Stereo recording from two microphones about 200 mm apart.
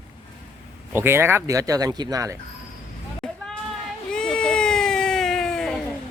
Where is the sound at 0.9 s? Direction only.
10° right (ahead or behind).